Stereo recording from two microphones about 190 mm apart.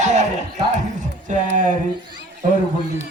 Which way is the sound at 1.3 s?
45° right (ahead or behind).